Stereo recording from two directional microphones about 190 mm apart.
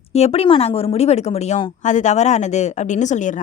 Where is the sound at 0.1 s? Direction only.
35° left (ahead or behind).